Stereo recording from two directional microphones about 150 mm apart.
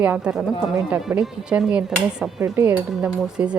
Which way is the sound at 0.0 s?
10° right (ahead or behind).